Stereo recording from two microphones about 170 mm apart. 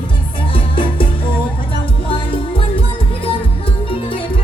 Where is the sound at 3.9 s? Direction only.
30° left (ahead or behind).